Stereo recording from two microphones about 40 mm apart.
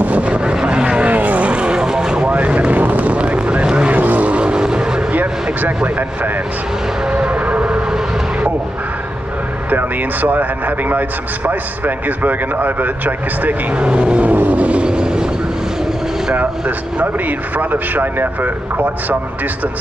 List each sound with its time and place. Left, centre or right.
0.0 s vehicle: right
1.0 s vehicle: right
1.5 s vehicle: right
2.2 s vehicle: right
3.2 s vehicle: right
3.9 s vehicle: right
4.3 s vehicle: right
5.1 s vehicle: right
7.1 s music: right
7.6 s vehicle: right
9.7 s a man's voice: right
13.7 s speech: right
14.9 s speech: right
16.3 s a man's voice: right